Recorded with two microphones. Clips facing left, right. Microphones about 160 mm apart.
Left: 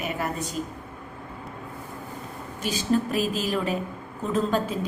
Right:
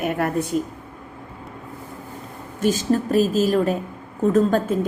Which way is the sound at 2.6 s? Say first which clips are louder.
Right 5 dB; 45° right (ahead or behind).